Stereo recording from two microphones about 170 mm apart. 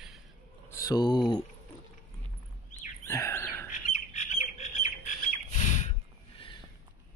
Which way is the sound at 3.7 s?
45° left (ahead or behind).